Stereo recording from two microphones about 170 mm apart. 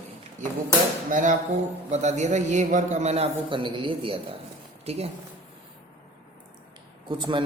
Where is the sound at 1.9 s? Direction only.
40° right (ahead or behind).